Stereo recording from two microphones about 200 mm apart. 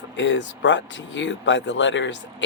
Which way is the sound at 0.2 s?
65° left (ahead or behind).